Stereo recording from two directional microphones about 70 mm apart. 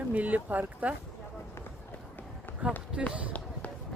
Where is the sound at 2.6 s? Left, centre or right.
Centre.